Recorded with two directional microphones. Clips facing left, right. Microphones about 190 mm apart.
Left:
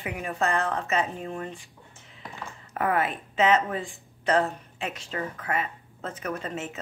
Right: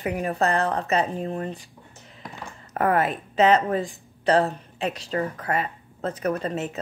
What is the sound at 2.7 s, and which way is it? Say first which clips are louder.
Speech: right 4 dB; 40° right (ahead or behind).